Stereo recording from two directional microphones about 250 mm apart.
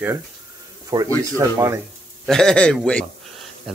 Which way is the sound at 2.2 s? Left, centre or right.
Centre.